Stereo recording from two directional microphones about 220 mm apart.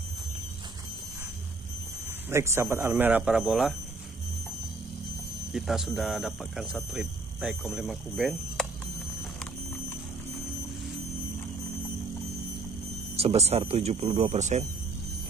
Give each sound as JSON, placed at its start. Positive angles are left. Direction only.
{"t": 2.3, "sound": "speech", "side_deg": -10}
{"t": 5.5, "sound": "speech", "side_deg": 0}
{"t": 13.1, "sound": "speech", "side_deg": -25}